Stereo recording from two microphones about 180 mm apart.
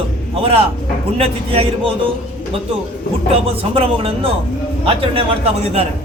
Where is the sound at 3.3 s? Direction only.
35° right (ahead or behind).